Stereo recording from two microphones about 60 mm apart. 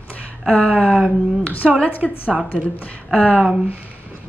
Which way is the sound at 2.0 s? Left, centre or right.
Right.